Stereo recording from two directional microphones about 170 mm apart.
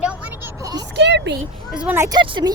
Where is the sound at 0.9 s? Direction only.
90° right.